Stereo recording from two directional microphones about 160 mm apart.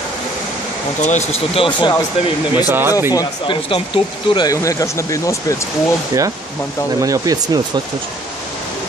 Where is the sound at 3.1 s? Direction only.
25° left (ahead or behind).